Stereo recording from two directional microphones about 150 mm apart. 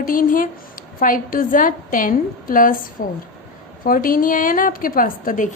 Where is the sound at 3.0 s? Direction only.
80° left.